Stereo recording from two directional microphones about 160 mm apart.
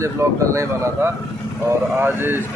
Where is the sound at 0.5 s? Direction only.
20° right (ahead or behind).